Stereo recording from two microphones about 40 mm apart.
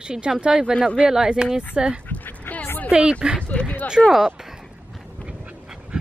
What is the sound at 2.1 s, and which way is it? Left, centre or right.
Dog, left.